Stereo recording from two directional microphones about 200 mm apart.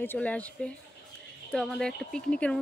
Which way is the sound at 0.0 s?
10° left (ahead or behind).